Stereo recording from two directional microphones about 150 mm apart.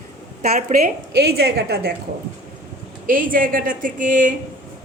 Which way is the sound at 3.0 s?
65° right (ahead or behind).